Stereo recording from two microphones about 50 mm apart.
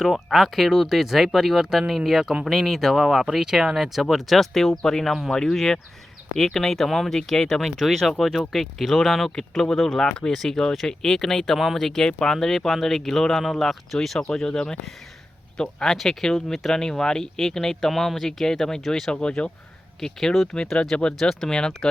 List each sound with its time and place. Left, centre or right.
0.0 s speech: centre
10.1 s speech: centre
20.7 s speech: centre
21.2 s speech: centre